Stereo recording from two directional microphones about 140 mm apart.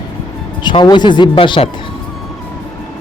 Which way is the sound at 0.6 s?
35° left (ahead or behind).